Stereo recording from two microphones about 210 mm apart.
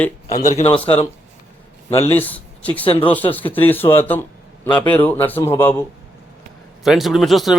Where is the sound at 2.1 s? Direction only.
10° left (ahead or behind).